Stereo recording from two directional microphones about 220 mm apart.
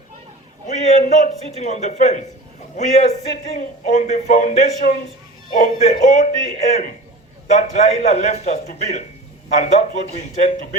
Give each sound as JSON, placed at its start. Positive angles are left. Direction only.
{"t": 0.9, "sound": "speech", "side_deg": 30}